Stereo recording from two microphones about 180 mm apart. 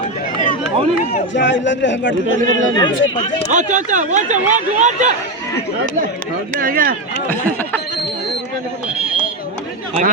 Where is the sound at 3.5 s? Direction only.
45° right (ahead or behind).